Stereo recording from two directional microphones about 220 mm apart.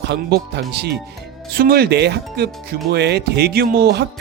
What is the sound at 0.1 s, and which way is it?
Speech, 50° right (ahead or behind).